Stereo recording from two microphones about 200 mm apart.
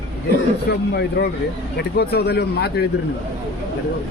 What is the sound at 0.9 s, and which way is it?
Speech, 55° left (ahead or behind).